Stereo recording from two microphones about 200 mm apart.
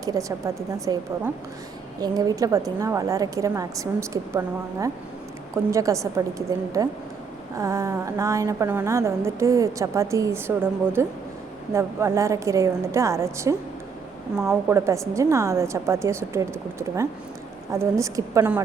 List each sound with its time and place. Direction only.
0.0 s a woman's voice: 15° right (ahead or behind)
14.3 s a woman's voice: 5° right (ahead or behind)
14.8 s a woman's voice: 15° right (ahead or behind)